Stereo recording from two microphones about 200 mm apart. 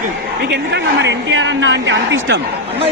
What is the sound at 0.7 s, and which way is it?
A man's voice, 65° right (ahead or behind).